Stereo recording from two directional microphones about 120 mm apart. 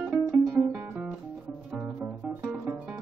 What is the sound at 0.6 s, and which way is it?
Guitar, 25° right (ahead or behind).